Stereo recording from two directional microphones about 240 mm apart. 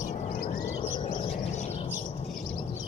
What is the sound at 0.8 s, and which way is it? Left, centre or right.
Bird, left.